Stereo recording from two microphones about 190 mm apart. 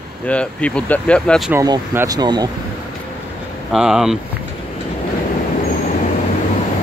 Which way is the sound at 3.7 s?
Centre (ahead or behind).